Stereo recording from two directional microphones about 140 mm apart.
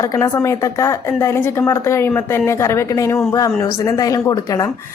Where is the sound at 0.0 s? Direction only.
20° left (ahead or behind).